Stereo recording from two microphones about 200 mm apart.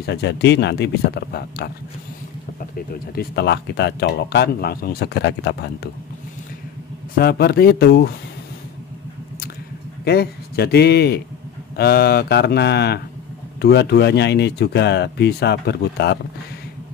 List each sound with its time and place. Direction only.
0.0 s speech: 60° left (ahead or behind)
2.9 s speech: 50° left (ahead or behind)
7.2 s a man's voice: 50° left (ahead or behind)
10.0 s a man's voice: 55° left (ahead or behind)